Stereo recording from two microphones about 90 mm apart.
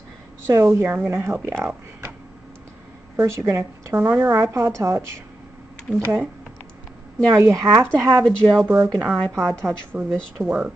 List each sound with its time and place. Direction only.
0.5 s speech: 30° right (ahead or behind)
3.2 s a woman's voice: 30° right (ahead or behind)
7.3 s a woman's voice: 30° right (ahead or behind)
8.2 s a woman's voice: 5° right (ahead or behind)
8.6 s speech: 30° right (ahead or behind)
10.4 s speech: 15° right (ahead or behind)